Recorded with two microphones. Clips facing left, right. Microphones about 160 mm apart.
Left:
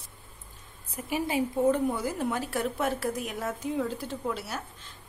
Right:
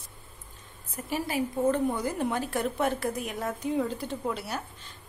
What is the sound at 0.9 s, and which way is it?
Speech, 15° left (ahead or behind).